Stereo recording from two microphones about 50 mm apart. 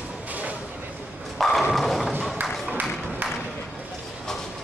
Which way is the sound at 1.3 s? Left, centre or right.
Centre.